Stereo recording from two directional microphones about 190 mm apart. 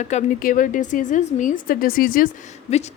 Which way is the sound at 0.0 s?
40° left (ahead or behind).